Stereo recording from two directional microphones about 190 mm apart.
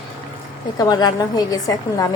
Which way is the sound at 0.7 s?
20° left (ahead or behind).